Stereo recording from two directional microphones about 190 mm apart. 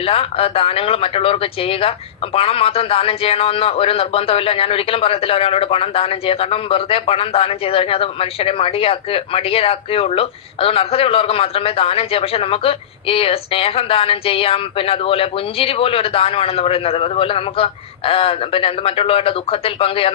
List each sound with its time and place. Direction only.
0.0 s speech: 30° left (ahead or behind)